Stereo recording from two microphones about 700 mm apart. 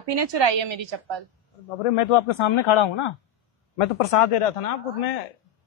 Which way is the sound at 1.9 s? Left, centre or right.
Left.